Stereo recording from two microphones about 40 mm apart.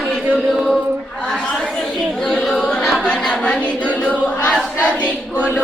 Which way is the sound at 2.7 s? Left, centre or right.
Centre.